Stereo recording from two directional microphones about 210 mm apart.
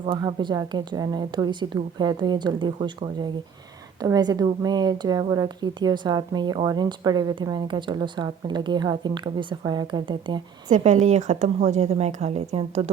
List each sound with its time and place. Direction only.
0.0 s a woman's voice: 25° right (ahead or behind)
10.7 s a woman's voice: 35° right (ahead or behind)